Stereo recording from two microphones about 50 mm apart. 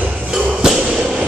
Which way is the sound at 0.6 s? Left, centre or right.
Centre.